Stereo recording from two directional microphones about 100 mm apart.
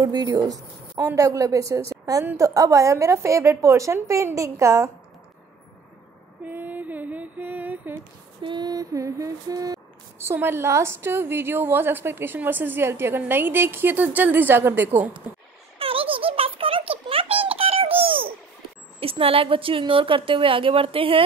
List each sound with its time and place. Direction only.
0.0 s a woman's voice: 45° right (ahead or behind)
6.4 s mantra: 15° right (ahead or behind)
8.4 s a woman's voice: 50° right (ahead or behind)
10.1 s a woman's voice: 25° right (ahead or behind)
15.3 s mantra: 15° right (ahead or behind)
15.8 s a sound: 65° right (ahead or behind)
18.9 s a woman's voice: 70° right (ahead or behind)